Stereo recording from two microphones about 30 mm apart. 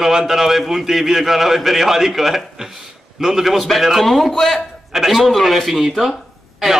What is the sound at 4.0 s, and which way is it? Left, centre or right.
A man's voice, centre.